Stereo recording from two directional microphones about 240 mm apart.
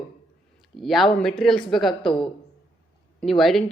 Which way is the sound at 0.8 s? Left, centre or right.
Centre.